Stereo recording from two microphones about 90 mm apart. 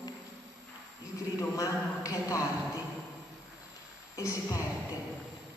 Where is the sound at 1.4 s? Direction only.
35° left (ahead or behind).